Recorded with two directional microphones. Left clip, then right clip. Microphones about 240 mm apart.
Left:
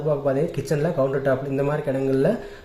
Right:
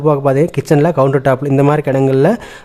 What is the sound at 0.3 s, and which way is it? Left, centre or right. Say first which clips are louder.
Speech: right 10 dB; right.